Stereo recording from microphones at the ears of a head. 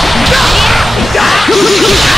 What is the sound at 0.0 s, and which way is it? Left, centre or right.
Music, centre.